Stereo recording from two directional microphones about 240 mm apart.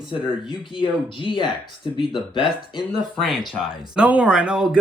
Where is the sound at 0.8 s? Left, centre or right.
Left.